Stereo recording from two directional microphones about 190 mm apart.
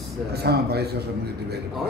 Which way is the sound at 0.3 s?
60° right (ahead or behind).